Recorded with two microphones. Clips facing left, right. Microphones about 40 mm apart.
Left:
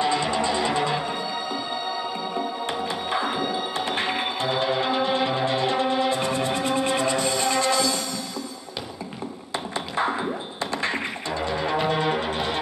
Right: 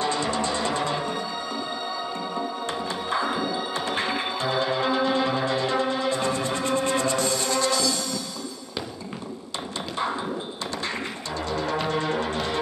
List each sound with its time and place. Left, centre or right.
0.0 s music: centre
2.6 s music: left
10.7 s music: left